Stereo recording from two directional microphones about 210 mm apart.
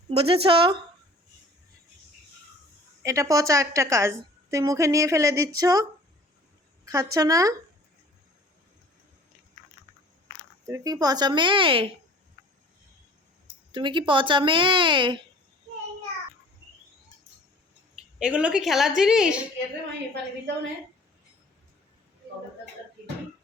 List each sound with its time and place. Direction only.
0.1 s speech: 30° right (ahead or behind)
3.0 s a woman's voice: 15° right (ahead or behind)
6.8 s a woman's voice: 15° right (ahead or behind)
10.7 s speech: 15° right (ahead or behind)
13.7 s speech: 25° right (ahead or behind)
18.2 s a woman's voice: 5° right (ahead or behind)